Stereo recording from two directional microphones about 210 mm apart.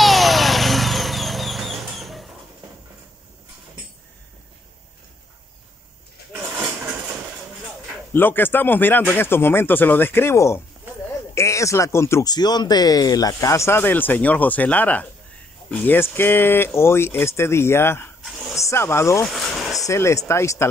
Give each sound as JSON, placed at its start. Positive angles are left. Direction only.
{"t": 0.0, "sound": "vehicle", "side_deg": 0}
{"t": 6.5, "sound": "a sound", "side_deg": -5}
{"t": 8.1, "sound": "speech", "side_deg": 10}
{"t": 18.2, "sound": "a sound", "side_deg": 0}
{"t": 18.6, "sound": "speech", "side_deg": 15}
{"t": 19.2, "sound": "speech", "side_deg": 0}
{"t": 19.8, "sound": "speech", "side_deg": 15}